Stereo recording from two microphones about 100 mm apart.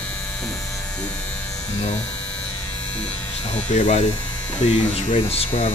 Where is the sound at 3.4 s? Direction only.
90° left.